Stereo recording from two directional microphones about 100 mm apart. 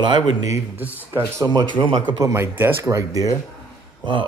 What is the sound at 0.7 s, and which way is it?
Speech, 20° right (ahead or behind).